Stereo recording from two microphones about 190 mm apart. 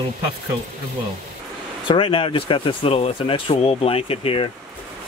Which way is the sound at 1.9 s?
30° left (ahead or behind).